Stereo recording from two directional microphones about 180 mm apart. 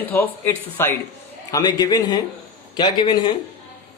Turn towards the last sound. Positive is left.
turn(degrees=25)  # may be behind; listen again after turning